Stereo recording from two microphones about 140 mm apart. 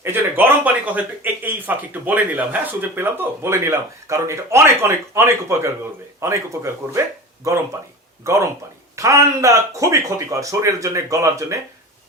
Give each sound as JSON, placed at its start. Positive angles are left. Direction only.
{"t": 0.0, "sound": "a sound", "side_deg": -15}
{"t": 1.2, "sound": "speech", "side_deg": -15}
{"t": 8.2, "sound": "speech", "side_deg": -20}